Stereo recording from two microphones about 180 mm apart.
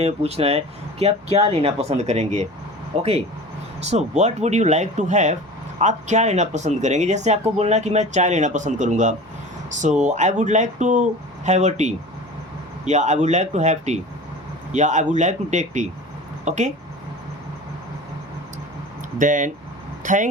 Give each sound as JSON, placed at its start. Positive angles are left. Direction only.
{"t": 0.0, "sound": "speech", "side_deg": -35}
{"t": 19.2, "sound": "speech", "side_deg": -45}